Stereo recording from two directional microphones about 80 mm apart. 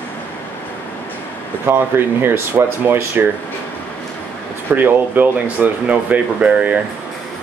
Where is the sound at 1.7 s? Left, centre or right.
Right.